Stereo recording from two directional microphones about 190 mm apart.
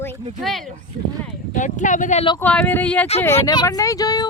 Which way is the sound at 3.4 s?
20° left (ahead or behind).